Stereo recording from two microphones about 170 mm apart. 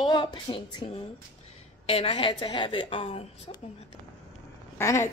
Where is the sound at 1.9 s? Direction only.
35° left (ahead or behind).